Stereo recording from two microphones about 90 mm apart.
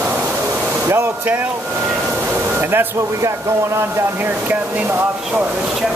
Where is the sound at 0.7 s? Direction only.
25° right (ahead or behind).